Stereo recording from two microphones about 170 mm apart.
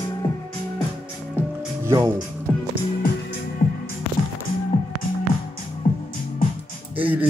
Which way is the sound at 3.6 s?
50° left (ahead or behind).